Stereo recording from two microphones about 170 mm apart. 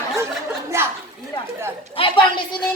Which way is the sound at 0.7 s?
15° right (ahead or behind).